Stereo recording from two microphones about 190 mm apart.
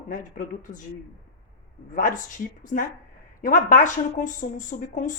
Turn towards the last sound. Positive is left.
turn(degrees=45)  # may be behind; listen again after turning